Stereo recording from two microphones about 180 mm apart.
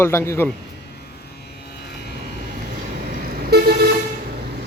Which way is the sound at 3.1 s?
60° right (ahead or behind).